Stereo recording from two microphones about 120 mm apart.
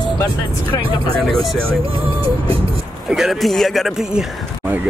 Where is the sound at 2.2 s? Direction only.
50° right (ahead or behind).